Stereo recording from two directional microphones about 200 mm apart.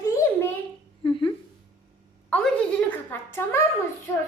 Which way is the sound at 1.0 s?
25° left (ahead or behind).